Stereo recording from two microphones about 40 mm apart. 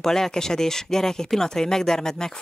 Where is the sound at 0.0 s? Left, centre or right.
Centre.